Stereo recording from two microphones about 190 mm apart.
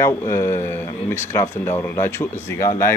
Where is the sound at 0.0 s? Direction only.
15° left (ahead or behind).